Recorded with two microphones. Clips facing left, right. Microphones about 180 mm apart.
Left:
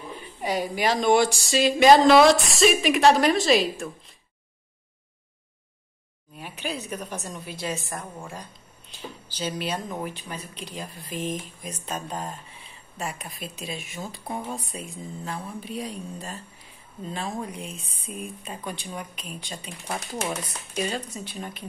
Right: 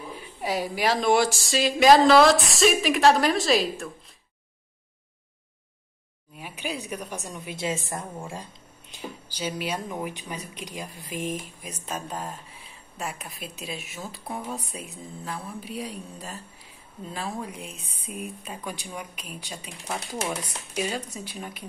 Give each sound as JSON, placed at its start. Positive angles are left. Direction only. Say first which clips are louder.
{"t": 0.4, "sound": "speech", "louder": "left 1 dB", "side_deg": 0}
{"t": 6.3, "sound": "a woman's voice", "louder": "left 1 dB", "side_deg": -10}
{"t": 8.9, "sound": "a woman's voice", "louder": "right 1 dB", "side_deg": -10}
{"t": 14.2, "sound": "speech", "louder": "left 1 dB", "side_deg": 10}
{"t": 14.7, "sound": "a woman's voice", "louder": "left 2 dB", "side_deg": -5}
{"t": 17.6, "sound": "speech", "louder": "left 2 dB", "side_deg": -60}
{"t": 18.1, "sound": "a woman's voice", "louder": "even", "side_deg": -10}